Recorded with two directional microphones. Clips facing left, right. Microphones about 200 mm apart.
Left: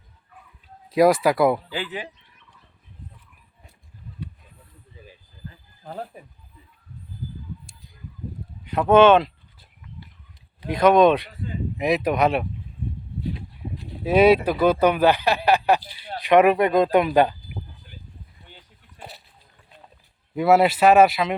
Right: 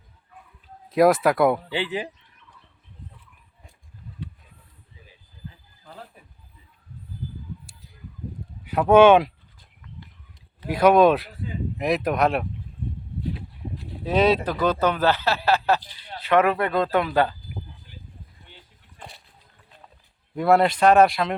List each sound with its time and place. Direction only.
0.9 s speech: centre (ahead or behind)
1.7 s speech: 25° right (ahead or behind)
5.8 s a sound: 50° left (ahead or behind)
8.6 s speech: 10° right (ahead or behind)
10.7 s speech: 10° right (ahead or behind)
14.0 s speech: 10° left (ahead or behind)
18.9 s a sound: 5° left (ahead or behind)
20.3 s speech: 5° left (ahead or behind)